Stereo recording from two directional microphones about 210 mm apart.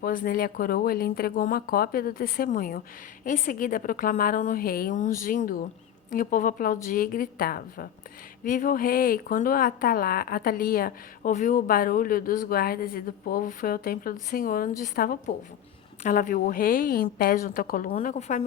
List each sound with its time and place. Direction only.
0.0 s a woman's voice: 40° left (ahead or behind)